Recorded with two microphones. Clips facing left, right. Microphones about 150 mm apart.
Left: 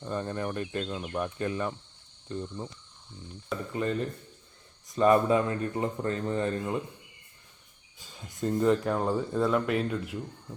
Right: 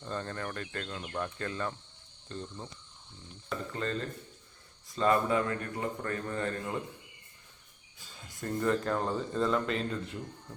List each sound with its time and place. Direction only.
0.0 s speech: 15° left (ahead or behind)
3.7 s speech: 15° left (ahead or behind)
7.9 s speech: 20° left (ahead or behind)